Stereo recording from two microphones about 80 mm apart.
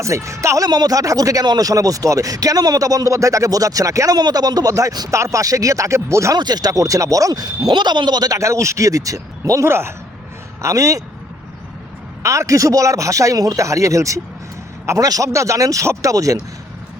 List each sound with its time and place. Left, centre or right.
0.0 s speech: right
6.3 s speech: right
7.7 s speech: right
8.4 s speech: right
10.6 s speech: right
12.2 s speech: right